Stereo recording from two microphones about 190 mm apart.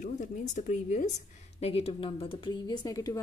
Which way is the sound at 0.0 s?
40° left (ahead or behind).